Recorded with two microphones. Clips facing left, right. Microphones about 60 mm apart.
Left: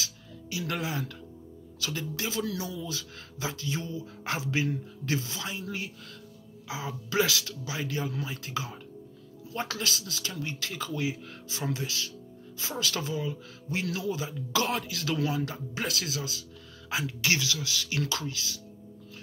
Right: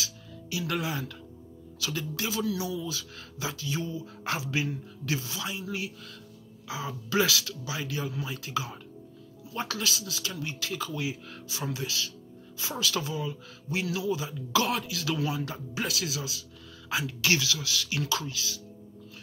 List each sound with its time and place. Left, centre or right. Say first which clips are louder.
0.0 s music: right 1 dB; left
1.8 s speech: right 1 dB; left
16.9 s speech: right 1 dB; left